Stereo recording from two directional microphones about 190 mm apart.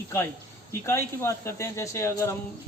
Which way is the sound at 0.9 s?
15° left (ahead or behind).